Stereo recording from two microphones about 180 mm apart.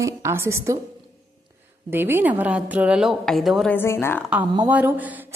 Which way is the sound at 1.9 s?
10° right (ahead or behind).